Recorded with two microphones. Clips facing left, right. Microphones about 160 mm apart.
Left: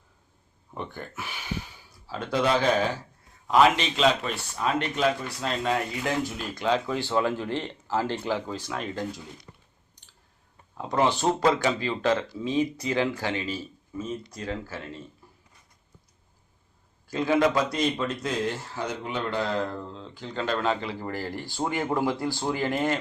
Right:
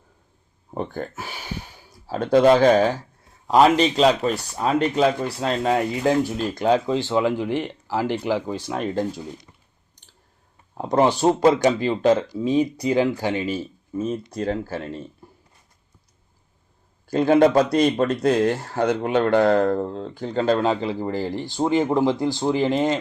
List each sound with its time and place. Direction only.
0.7 s a sound: 40° right (ahead or behind)
2.0 s a man's voice: 50° right (ahead or behind); by 6.6 s 30° right (ahead or behind)
6.6 s a man's voice: 40° right (ahead or behind)
6.8 s speech: 20° right (ahead or behind)
8.5 s speech: 30° right (ahead or behind)
10.8 s a man's voice: 45° right (ahead or behind)
11.3 s speech: 20° right (ahead or behind)
12.4 s a man's voice: 35° right (ahead or behind)
13.0 s speech: 20° right (ahead or behind)
14.4 s a man's voice: 40° right (ahead or behind)
17.1 s a man's voice: 45° right (ahead or behind)
20.3 s speech: 35° right (ahead or behind)